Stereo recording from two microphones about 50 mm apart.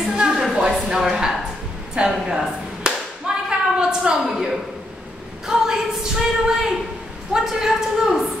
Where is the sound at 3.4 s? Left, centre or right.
Centre.